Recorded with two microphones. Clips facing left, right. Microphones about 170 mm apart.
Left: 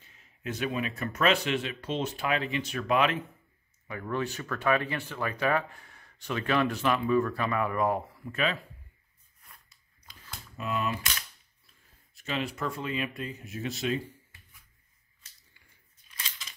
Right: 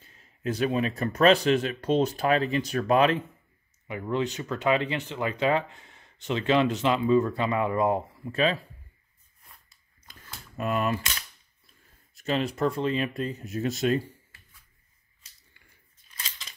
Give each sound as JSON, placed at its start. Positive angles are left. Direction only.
{"t": 0.1, "sound": "speech", "side_deg": -35}
{"t": 3.8, "sound": "speech", "side_deg": -20}
{"t": 10.6, "sound": "cap gun", "side_deg": -55}
{"t": 12.2, "sound": "speech", "side_deg": -40}